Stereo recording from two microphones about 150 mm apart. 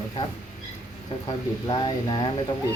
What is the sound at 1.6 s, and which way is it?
Speech, 30° left (ahead or behind).